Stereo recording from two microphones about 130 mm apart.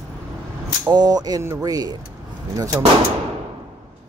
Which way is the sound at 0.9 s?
30° right (ahead or behind).